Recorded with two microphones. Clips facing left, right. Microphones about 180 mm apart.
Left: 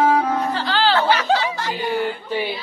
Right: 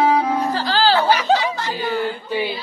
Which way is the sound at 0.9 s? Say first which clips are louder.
Right 1 dB; 10° right (ahead or behind).